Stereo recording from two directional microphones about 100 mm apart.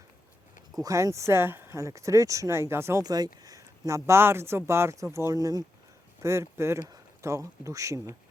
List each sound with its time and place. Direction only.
0.8 s speech: 35° right (ahead or behind)
3.0 s speech: 40° right (ahead or behind)